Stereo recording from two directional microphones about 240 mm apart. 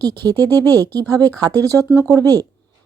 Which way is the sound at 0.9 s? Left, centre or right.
Centre.